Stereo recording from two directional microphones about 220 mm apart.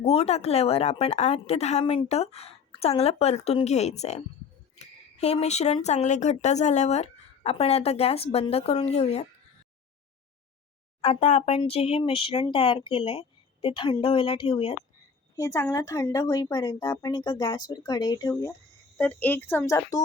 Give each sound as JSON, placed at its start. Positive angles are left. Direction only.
{"t": 0.0, "sound": "speech", "side_deg": 30}
{"t": 11.0, "sound": "speech", "side_deg": 30}
{"t": 15.4, "sound": "speech", "side_deg": 15}